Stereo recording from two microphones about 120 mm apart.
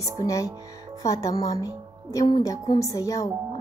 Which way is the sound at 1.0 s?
30° left (ahead or behind).